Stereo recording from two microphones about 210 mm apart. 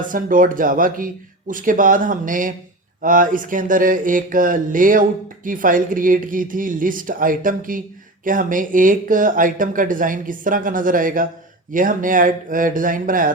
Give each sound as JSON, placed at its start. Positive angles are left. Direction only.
{"t": 0.1, "sound": "speech", "side_deg": -40}